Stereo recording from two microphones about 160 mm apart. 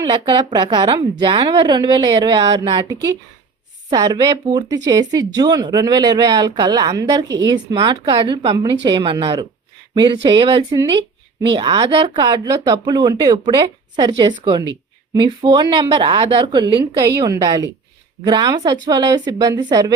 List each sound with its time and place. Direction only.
0.0 s speech: 30° right (ahead or behind)
3.8 s speech: 25° right (ahead or behind)
7.8 s speech: 35° right (ahead or behind)
16.8 s speech: 20° right (ahead or behind)